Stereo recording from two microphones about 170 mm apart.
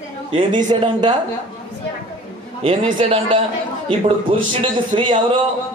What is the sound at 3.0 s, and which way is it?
Speech, 30° right (ahead or behind).